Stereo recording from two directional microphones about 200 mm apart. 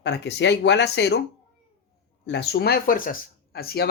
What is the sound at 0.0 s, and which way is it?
Speech, 60° left (ahead or behind).